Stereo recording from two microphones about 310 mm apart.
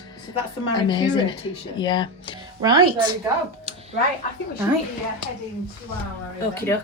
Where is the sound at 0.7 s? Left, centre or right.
Centre.